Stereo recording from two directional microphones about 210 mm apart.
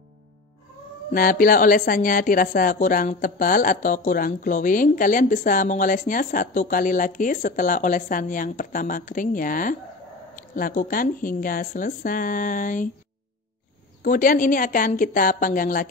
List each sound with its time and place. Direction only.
1.1 s speech: 40° left (ahead or behind)
14.0 s speech: 40° left (ahead or behind)